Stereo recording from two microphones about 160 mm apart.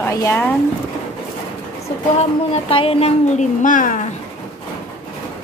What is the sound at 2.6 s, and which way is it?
A woman's voice, 35° left (ahead or behind).